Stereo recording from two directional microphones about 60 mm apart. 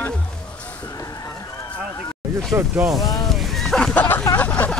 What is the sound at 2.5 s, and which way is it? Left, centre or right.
Speech, right.